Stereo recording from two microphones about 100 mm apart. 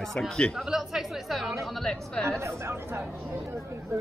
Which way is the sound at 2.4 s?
25° right (ahead or behind).